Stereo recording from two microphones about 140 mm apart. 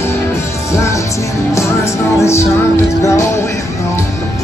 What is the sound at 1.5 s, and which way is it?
Music, 20° left (ahead or behind).